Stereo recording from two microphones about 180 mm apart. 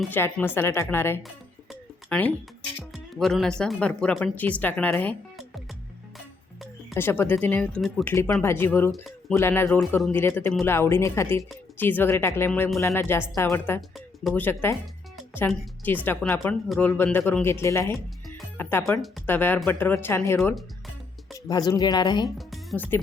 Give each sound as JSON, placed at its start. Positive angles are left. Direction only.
{"t": 0.1, "sound": "speech", "side_deg": 10}
{"t": 2.9, "sound": "music", "side_deg": 0}
{"t": 3.6, "sound": "speech", "side_deg": 5}
{"t": 6.9, "sound": "speech", "side_deg": 15}
{"t": 8.0, "sound": "speech", "side_deg": 15}
{"t": 16.6, "sound": "speech", "side_deg": 0}
{"t": 16.9, "sound": "speech", "side_deg": 10}